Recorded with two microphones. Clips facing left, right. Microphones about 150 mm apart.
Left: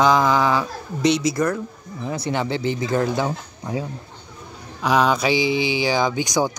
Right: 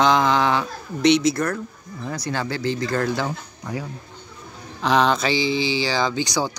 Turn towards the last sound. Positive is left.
turn(degrees=15)  # may be behind; listen again after turning